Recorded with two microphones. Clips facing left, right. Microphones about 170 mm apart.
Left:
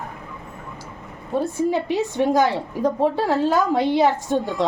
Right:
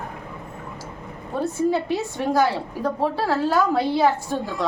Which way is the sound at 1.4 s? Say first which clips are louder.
Right 2 dB; 15° left (ahead or behind).